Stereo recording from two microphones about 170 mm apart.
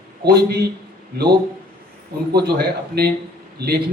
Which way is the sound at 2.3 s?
70° right (ahead or behind).